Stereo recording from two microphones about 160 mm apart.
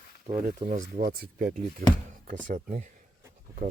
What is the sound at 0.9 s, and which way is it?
Speech, 60° right (ahead or behind).